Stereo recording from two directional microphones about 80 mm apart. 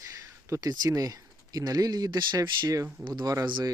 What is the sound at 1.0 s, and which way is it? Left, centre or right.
Speech, right.